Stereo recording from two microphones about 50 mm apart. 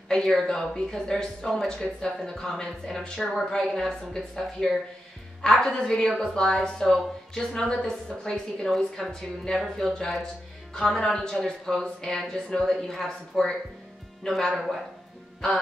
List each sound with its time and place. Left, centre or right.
0.5 s a woman's voice: centre
7.6 s speech: centre
8.6 s speech: centre